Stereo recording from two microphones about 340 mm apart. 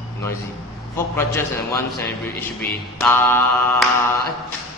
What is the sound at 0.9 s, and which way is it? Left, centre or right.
Mantra, centre.